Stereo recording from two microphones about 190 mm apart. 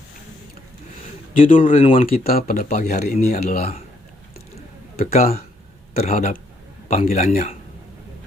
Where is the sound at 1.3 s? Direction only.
45° left (ahead or behind).